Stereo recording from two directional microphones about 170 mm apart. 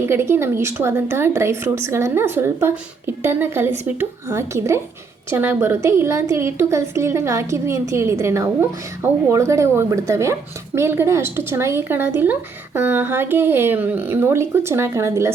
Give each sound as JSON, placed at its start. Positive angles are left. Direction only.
{"t": 0.0, "sound": "speech", "side_deg": -15}